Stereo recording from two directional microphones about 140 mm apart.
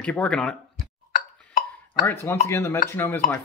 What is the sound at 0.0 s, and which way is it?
Speech, 10° left (ahead or behind).